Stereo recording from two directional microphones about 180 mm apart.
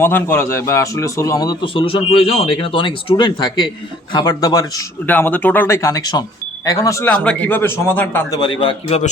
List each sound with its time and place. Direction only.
0.0 s a man's voice: 10° left (ahead or behind)
7.1 s a man's voice: 5° left (ahead or behind)
8.4 s a man's voice: 25° left (ahead or behind)